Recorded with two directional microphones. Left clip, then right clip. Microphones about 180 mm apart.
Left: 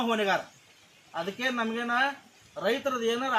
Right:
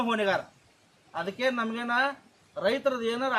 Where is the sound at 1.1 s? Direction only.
20° right (ahead or behind).